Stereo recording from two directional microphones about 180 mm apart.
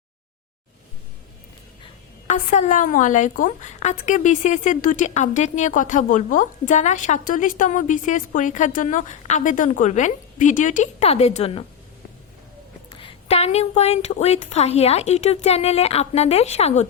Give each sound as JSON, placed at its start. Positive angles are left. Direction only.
{"t": 2.2, "sound": "a woman's voice", "side_deg": 40}
{"t": 12.9, "sound": "a woman's voice", "side_deg": 30}